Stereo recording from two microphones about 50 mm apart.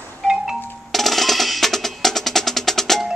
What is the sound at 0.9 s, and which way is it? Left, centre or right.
Percussion, centre.